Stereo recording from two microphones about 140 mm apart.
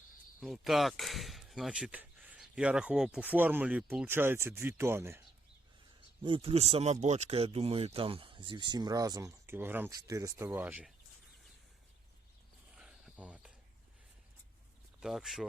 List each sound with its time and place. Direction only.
0.3 s speech: centre (ahead or behind); by 5.2 s 15° right (ahead or behind)
6.2 s speech: 40° right (ahead or behind); by 9.9 s 15° right (ahead or behind)
9.9 s speech: 25° right (ahead or behind)
12.7 s cricket: 5° right (ahead or behind)
15.0 s speech: centre (ahead or behind)